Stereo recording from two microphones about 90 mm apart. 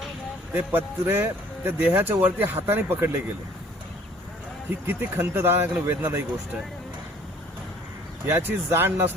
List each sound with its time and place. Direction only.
0.5 s speech: 20° right (ahead or behind)
4.7 s speech: 20° right (ahead or behind)
8.3 s speech: 25° right (ahead or behind)